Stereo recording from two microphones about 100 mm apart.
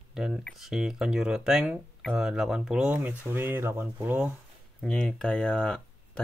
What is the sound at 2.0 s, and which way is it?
Speech, 5° left (ahead or behind).